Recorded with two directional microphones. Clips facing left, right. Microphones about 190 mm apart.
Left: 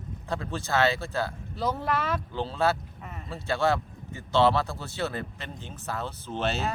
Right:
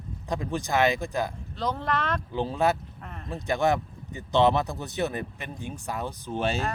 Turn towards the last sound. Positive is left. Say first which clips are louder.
# right 2 dB
turn(degrees=-10)  # may be behind; listen again after turning